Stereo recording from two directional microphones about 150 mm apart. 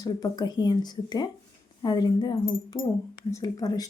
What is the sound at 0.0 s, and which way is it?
Speech, 25° left (ahead or behind).